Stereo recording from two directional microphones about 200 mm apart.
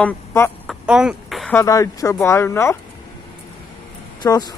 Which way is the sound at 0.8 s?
5° right (ahead or behind).